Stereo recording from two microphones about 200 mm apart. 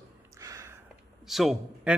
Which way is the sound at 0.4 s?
15° right (ahead or behind).